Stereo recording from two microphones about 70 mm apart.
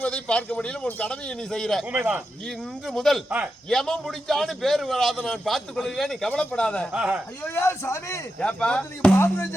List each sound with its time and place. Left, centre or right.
0.0 s a man's voice: centre
1.9 s speech: centre
2.8 s a man's voice: centre
3.2 s a man's voice: centre
3.7 s a man's voice: centre
6.9 s speech: centre
7.4 s a man's voice: left
8.4 s a man's voice: centre
9.1 s a man's voice: left